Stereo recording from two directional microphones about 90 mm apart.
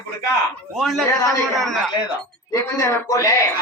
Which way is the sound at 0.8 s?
Centre (ahead or behind).